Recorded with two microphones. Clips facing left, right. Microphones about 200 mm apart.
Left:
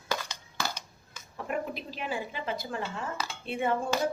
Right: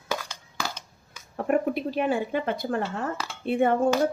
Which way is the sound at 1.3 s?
55° right (ahead or behind).